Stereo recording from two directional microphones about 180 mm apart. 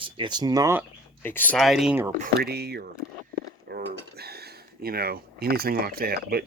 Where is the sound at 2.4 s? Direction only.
65° right (ahead or behind).